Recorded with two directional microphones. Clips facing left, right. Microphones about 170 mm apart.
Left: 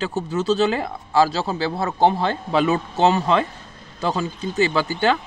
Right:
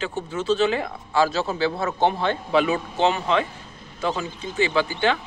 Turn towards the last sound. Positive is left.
turn(degrees=40)  # may be behind; listen again after turning